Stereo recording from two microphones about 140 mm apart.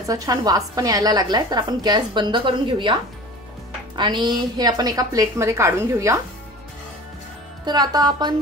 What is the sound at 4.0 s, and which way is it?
A woman's voice, 35° right (ahead or behind).